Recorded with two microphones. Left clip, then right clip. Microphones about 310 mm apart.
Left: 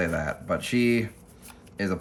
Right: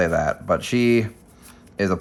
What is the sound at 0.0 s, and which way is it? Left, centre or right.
Speech, centre.